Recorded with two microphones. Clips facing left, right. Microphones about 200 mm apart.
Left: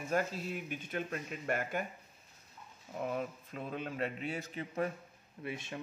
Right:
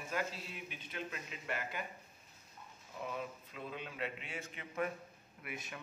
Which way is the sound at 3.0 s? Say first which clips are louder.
Left 6 dB; 50° left (ahead or behind).